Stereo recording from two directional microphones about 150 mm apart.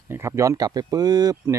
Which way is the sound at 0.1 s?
20° right (ahead or behind).